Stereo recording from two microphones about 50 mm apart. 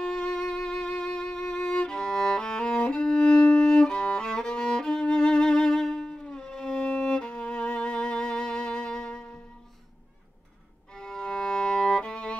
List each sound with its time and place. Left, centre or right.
0.0 s music: centre
11.0 s violin: centre